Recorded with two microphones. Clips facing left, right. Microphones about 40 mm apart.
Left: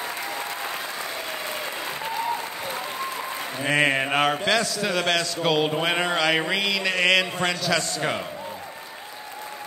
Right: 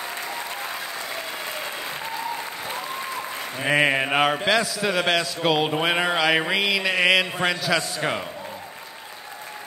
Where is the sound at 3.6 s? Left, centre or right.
Centre.